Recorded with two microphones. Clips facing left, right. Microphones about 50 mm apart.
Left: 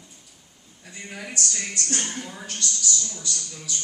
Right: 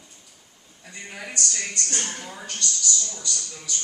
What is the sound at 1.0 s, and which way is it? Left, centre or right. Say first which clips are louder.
A woman's voice: even; centre.